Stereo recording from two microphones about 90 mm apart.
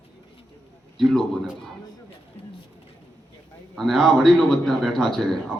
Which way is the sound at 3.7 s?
5° left (ahead or behind).